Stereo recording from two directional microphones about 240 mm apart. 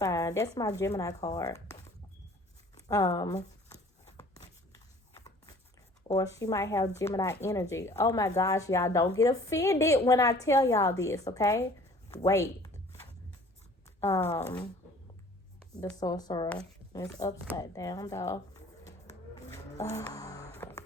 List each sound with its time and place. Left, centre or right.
0.0 s speech: centre
2.8 s speech: centre
4.2 s a sound: centre
6.1 s speech: centre
12.1 s a sound: centre
14.0 s speech: centre
16.0 s speech: centre
17.6 s a sound: centre
20.0 s music: centre